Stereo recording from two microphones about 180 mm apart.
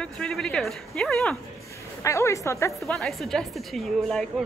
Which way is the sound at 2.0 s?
15° left (ahead or behind).